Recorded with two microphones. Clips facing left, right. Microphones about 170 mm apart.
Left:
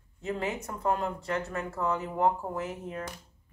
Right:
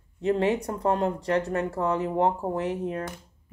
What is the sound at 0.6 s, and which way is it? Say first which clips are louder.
Speech: right 5 dB; 35° right (ahead or behind).